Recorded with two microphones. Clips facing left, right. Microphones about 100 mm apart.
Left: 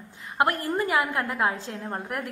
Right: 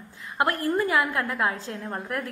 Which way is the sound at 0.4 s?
25° left (ahead or behind).